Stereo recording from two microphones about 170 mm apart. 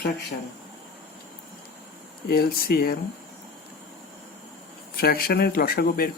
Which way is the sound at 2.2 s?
60° left (ahead or behind).